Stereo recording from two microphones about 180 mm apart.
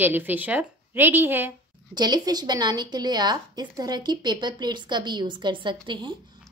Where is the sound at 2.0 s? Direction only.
20° right (ahead or behind).